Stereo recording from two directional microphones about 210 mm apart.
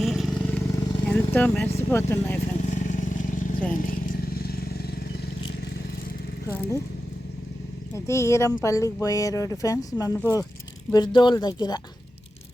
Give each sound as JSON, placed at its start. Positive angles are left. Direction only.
{"t": 0.0, "sound": "vehicle", "side_deg": 0}
{"t": 1.0, "sound": "speech", "side_deg": 5}
{"t": 2.6, "sound": "vehicle", "side_deg": 35}
{"t": 7.9, "sound": "speech", "side_deg": 15}